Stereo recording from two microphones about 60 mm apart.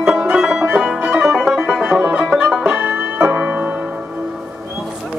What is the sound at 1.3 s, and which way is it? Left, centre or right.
Music, centre.